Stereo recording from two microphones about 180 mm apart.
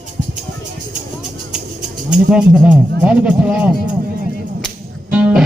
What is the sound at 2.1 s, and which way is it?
Speech, 5° right (ahead or behind).